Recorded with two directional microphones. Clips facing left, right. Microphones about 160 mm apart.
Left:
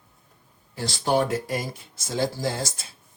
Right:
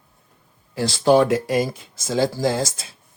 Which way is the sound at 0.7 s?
90° right.